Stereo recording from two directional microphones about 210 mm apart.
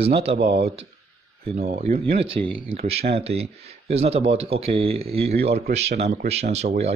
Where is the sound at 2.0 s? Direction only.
25° right (ahead or behind).